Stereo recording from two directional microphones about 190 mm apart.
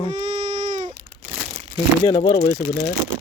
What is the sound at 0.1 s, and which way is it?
Baby cry, 40° right (ahead or behind).